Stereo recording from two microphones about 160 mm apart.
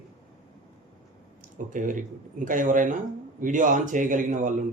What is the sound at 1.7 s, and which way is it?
Speech, 55° right (ahead or behind).